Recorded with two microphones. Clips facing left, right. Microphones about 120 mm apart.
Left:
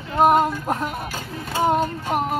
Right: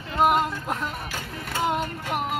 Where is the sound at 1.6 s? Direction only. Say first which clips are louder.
Left 6 dB; 40° left (ahead or behind).